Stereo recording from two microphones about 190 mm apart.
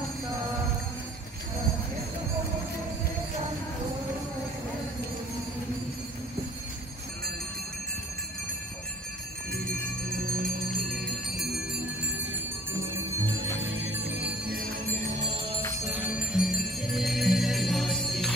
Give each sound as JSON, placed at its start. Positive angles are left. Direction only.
{"t": 13.6, "sound": "music", "side_deg": -75}
{"t": 14.5, "sound": "music", "side_deg": -50}
{"t": 15.8, "sound": "music", "side_deg": -10}